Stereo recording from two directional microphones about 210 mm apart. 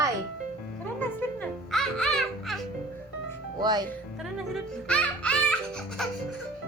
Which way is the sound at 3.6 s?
20° right (ahead or behind).